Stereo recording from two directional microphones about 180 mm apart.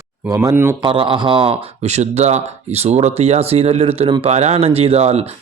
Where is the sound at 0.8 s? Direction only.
30° right (ahead or behind).